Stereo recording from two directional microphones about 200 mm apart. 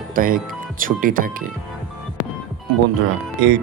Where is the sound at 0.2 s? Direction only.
45° right (ahead or behind).